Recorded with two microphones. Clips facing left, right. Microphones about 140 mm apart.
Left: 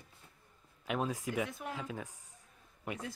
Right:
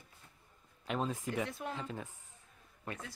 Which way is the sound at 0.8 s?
5° left (ahead or behind).